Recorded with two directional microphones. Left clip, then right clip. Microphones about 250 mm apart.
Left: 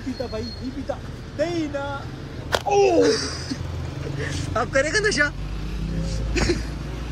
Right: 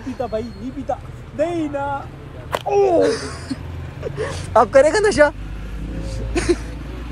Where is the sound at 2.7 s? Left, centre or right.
Centre.